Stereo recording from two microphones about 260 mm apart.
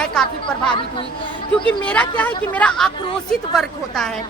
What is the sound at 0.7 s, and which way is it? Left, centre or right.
Speech, centre.